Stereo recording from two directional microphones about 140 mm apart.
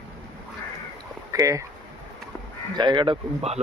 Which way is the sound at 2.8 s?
35° right (ahead or behind).